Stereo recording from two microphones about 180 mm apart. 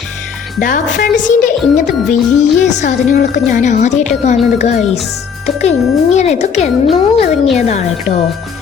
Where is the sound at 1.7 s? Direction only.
45° left (ahead or behind).